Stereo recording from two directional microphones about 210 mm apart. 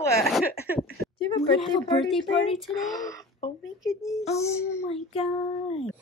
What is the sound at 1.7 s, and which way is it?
Child singing, 25° left (ahead or behind).